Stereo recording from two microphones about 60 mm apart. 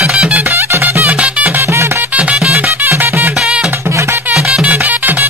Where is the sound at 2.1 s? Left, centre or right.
Right.